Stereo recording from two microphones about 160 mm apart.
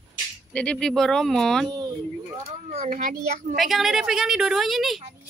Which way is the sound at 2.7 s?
50° right (ahead or behind).